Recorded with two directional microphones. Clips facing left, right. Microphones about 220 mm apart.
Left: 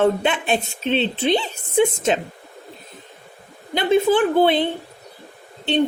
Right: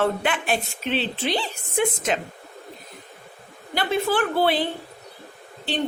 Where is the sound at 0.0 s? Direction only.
25° left (ahead or behind).